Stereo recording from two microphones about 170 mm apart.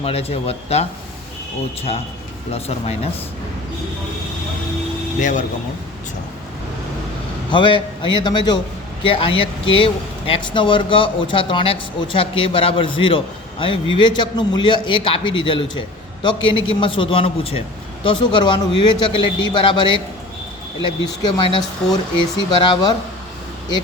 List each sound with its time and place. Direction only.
0.0 s speech: 35° left (ahead or behind)
2.5 s speech: 35° left (ahead or behind)
5.2 s speech: 45° left (ahead or behind)
7.5 s a man's voice: 30° left (ahead or behind)
21.0 s a man's voice: 25° left (ahead or behind)